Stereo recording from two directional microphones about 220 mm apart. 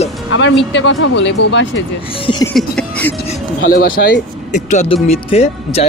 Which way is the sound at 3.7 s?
40° left (ahead or behind).